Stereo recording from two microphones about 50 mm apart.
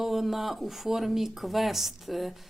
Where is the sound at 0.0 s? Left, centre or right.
Centre.